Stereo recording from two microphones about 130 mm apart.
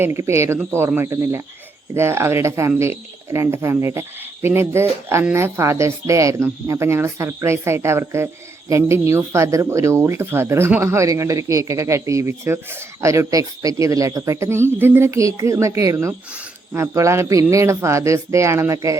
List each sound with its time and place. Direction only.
0.0 s speech: 20° right (ahead or behind)